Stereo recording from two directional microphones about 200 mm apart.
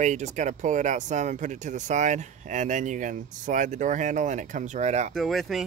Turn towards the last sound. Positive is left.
turn(degrees=0)  # may be behind; listen again after turning